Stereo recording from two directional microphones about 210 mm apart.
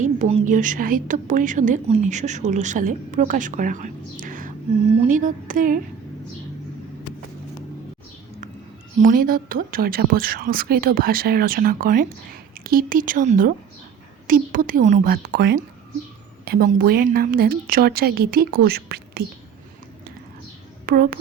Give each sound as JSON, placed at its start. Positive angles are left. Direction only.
{"t": 0.0, "sound": "a woman's voice", "side_deg": -30}
{"t": 9.0, "sound": "a woman's voice", "side_deg": -40}
{"t": 20.8, "sound": "a woman's voice", "side_deg": -45}